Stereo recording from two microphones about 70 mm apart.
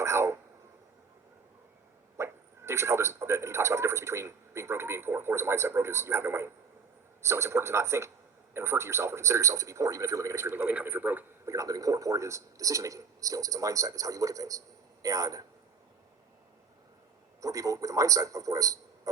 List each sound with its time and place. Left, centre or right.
0.0 s speech: right
2.1 s a man's voice: right
10.6 s speech: right
11.4 s a man's voice: right
17.4 s a man's voice: right